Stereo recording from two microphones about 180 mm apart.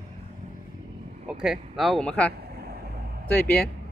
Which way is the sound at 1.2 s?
Centre (ahead or behind).